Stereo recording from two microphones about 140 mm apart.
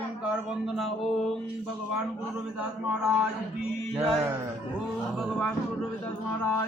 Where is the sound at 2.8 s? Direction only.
10° right (ahead or behind).